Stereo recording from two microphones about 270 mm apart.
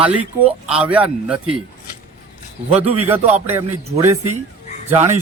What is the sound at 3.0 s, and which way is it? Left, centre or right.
Speech, centre.